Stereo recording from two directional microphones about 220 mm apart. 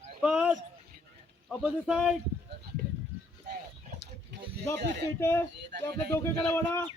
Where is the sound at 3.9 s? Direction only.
30° right (ahead or behind).